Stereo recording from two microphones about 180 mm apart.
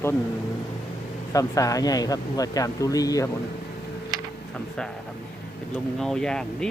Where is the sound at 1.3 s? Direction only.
20° left (ahead or behind).